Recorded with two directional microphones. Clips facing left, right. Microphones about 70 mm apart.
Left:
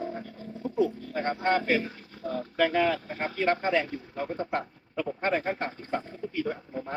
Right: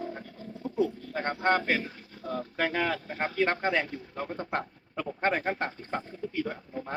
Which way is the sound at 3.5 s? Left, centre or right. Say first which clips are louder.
Left 2 dB; right.